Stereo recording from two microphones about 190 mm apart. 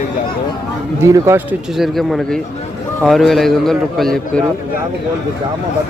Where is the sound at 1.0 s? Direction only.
15° right (ahead or behind).